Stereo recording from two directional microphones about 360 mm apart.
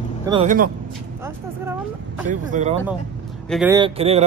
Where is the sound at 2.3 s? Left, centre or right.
Centre.